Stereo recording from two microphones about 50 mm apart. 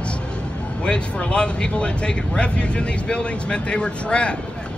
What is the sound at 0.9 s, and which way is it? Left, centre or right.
Speech, left.